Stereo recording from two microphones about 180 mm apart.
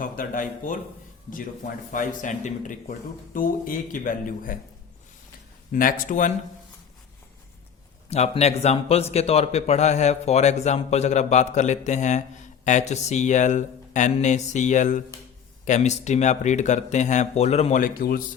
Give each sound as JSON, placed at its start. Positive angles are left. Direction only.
{"t": 0.0, "sound": "speech", "side_deg": 50}
{"t": 1.9, "sound": "speech", "side_deg": 45}
{"t": 5.7, "sound": "speech", "side_deg": 50}
{"t": 8.1, "sound": "a man's voice", "side_deg": 35}